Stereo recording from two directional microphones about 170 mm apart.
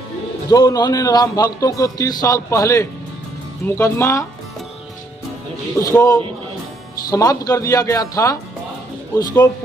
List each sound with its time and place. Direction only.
0.5 s a man's voice: 25° left (ahead or behind)
5.8 s a man's voice: 20° left (ahead or behind)